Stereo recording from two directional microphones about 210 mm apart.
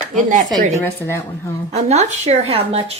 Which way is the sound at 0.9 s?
10° left (ahead or behind).